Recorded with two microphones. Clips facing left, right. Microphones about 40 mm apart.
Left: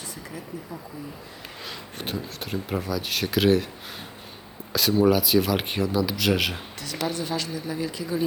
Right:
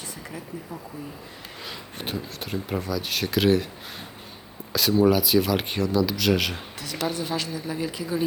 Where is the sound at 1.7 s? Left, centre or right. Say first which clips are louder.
Even; centre.